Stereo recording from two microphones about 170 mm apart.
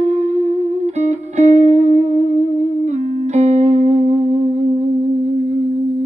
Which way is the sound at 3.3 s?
40° right (ahead or behind).